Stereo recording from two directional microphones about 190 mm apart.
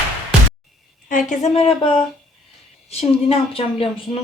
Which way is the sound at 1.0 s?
45° left (ahead or behind).